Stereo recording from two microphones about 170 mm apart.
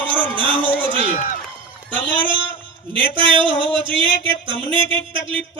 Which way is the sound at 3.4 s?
30° right (ahead or behind).